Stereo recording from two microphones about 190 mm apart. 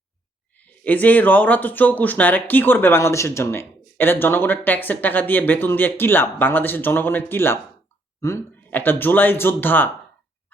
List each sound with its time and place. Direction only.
0.5 s speech: 10° left (ahead or behind)